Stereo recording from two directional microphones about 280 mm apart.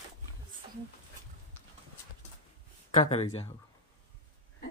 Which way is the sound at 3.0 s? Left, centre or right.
Left.